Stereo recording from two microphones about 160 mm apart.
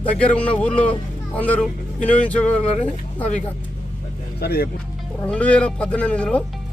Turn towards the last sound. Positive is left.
turn(degrees=5)  # may be behind; listen again after turning